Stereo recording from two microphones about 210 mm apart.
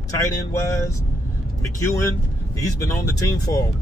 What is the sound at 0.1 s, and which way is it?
Speech, 15° left (ahead or behind).